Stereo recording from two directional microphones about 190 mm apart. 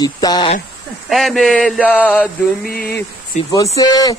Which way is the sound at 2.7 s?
50° left (ahead or behind).